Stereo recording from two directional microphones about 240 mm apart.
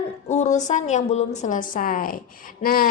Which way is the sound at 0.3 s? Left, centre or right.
Left.